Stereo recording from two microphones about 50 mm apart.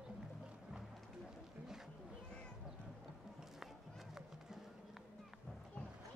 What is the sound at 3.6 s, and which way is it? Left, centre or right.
Run, centre.